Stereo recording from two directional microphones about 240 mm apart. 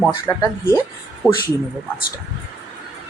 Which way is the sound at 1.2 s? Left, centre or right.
Centre.